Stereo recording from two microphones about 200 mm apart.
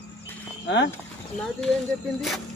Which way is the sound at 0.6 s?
60° left (ahead or behind).